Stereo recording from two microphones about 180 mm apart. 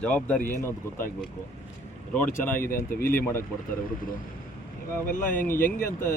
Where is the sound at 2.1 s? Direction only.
10° left (ahead or behind).